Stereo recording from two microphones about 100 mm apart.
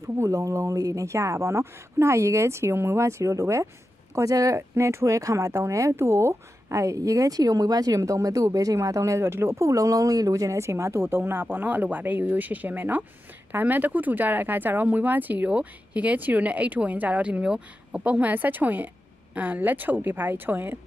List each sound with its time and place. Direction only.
0.0 s speech: 30° right (ahead or behind)